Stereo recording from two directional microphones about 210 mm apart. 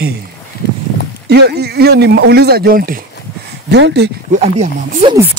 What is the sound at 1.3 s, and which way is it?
Speech, 50° right (ahead or behind).